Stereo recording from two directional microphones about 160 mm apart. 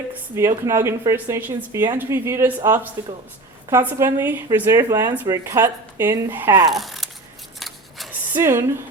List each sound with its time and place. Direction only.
0.1 s speech: 15° right (ahead or behind)
6.7 s speech: centre (ahead or behind)
7.6 s scissors: centre (ahead or behind)
8.3 s speech: 15° right (ahead or behind)